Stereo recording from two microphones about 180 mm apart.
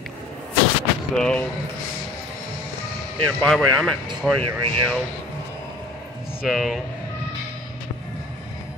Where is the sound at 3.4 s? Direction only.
5° left (ahead or behind).